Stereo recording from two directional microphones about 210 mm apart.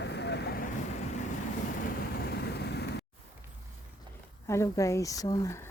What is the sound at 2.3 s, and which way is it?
Vehicle, 50° left (ahead or behind).